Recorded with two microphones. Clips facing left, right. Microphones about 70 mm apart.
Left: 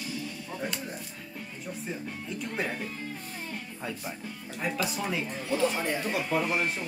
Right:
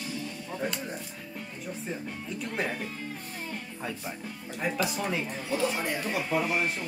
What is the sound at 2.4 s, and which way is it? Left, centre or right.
Music, centre.